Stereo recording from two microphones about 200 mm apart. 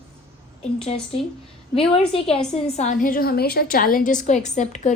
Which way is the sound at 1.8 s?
30° left (ahead or behind).